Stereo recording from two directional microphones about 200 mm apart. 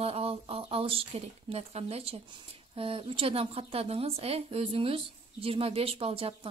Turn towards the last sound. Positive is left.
turn(degrees=-30)  # may be behind; listen again after turning